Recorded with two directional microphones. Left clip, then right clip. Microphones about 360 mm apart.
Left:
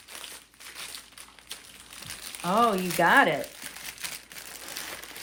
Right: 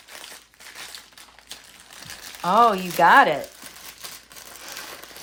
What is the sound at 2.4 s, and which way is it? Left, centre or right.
Speech, centre.